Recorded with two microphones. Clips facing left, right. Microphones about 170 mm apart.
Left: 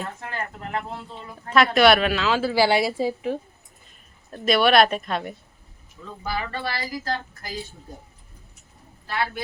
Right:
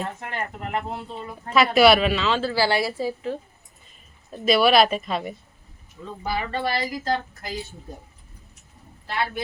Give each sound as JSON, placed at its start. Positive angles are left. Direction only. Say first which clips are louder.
{"t": 0.0, "sound": "speech", "louder": "right 2 dB", "side_deg": -20}
{"t": 1.7, "sound": "a woman's voice", "louder": "right 2 dB", "side_deg": -5}
{"t": 4.3, "sound": "speech", "louder": "right 1 dB", "side_deg": 0}
{"t": 6.2, "sound": "speech", "louder": "right 3 dB", "side_deg": -20}
{"t": 9.0, "sound": "speech", "louder": "even", "side_deg": -20}